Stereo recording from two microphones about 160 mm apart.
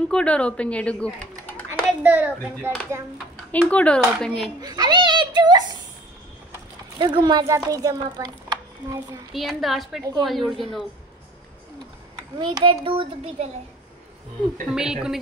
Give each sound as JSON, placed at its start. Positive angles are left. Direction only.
{"t": 0.1, "sound": "speech", "side_deg": 5}
{"t": 1.7, "sound": "a child's voice", "side_deg": -10}
{"t": 3.5, "sound": "speech", "side_deg": 10}
{"t": 4.6, "sound": "a woman's voice", "side_deg": -25}
{"t": 7.0, "sound": "a woman's voice", "side_deg": -30}
{"t": 9.3, "sound": "a woman's voice", "side_deg": 0}
{"t": 12.4, "sound": "a child's voice", "side_deg": -30}
{"t": 14.7, "sound": "a woman's voice", "side_deg": -5}